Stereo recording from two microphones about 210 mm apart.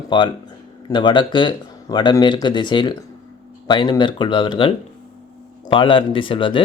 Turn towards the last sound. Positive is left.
turn(degrees=25)  # may be behind; listen again after turning